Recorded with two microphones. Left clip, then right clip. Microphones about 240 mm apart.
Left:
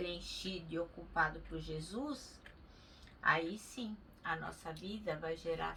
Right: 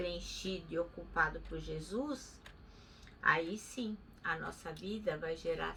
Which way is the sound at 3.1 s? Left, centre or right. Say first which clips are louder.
Right 2 dB; centre.